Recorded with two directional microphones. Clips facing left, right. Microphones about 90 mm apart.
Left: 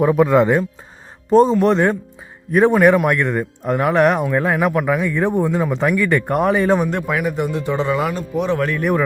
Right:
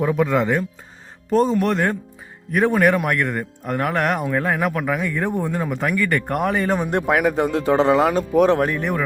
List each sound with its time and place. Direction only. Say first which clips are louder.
0.0 s speech: left 5 dB; 40° left (ahead or behind)
2.7 s speech: left 4 dB; 20° left (ahead or behind)
6.9 s speech: right 2 dB; 45° right (ahead or behind)
8.8 s speech: left 5 dB; 10° left (ahead or behind)